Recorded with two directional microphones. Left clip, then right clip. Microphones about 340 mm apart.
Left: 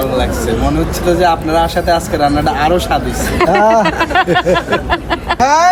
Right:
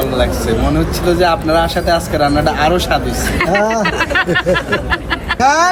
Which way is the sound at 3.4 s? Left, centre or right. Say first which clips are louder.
Left 5 dB; centre.